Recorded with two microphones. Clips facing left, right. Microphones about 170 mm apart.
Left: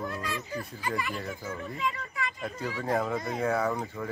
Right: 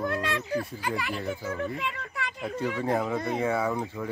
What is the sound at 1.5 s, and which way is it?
Speech, 70° right (ahead or behind).